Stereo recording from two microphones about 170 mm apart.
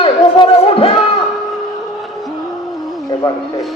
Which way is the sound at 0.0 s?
35° left (ahead or behind).